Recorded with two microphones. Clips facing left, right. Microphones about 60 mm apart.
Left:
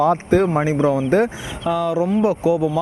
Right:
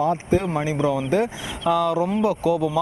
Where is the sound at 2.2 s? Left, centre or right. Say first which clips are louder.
Left 3 dB; left.